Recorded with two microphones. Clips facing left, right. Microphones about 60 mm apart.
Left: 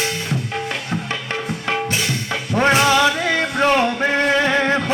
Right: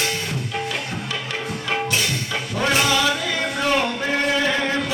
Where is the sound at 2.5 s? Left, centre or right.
Left.